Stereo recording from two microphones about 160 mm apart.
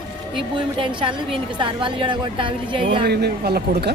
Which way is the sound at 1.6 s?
30° right (ahead or behind).